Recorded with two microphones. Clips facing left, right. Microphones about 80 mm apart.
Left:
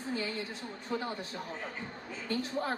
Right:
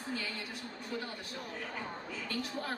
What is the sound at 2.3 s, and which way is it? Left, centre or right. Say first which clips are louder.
Speech: left 6 dB; left.